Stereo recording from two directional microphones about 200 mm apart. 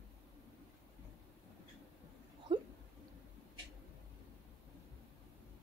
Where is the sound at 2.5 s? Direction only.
25° right (ahead or behind).